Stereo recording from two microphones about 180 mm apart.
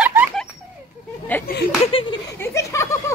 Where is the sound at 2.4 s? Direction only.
15° left (ahead or behind).